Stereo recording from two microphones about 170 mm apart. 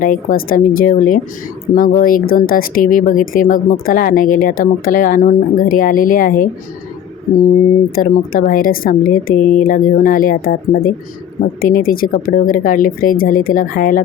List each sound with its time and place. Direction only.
0.0 s speech: 55° left (ahead or behind)
7.9 s speech: 55° left (ahead or behind)